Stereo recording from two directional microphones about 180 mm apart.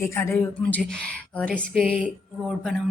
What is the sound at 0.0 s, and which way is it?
A woman's voice, 15° left (ahead or behind).